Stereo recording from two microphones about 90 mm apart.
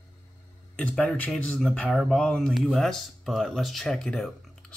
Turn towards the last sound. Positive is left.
turn(degrees=5)  # may be behind; listen again after turning